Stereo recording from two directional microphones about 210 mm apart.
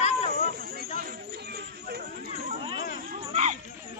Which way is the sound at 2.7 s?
45° left (ahead or behind).